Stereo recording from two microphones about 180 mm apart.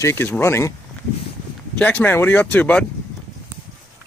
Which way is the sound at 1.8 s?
10° left (ahead or behind).